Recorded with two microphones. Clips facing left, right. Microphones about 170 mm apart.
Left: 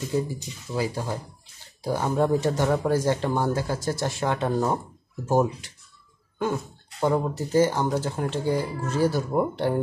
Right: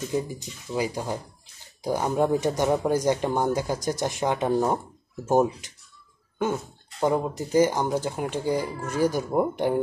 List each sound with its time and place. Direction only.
0.7 s speech: 15° right (ahead or behind)
7.0 s speech: 15° right (ahead or behind)